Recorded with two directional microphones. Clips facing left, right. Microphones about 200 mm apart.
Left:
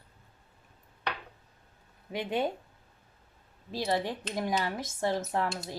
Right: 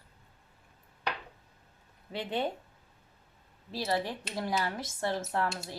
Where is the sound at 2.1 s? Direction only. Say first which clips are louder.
Left 2 dB; 15° left (ahead or behind).